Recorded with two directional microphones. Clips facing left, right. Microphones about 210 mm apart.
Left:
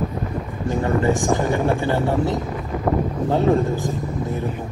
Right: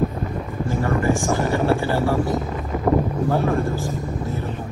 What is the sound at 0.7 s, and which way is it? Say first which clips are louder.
Speech: left 2 dB; 20° left (ahead or behind).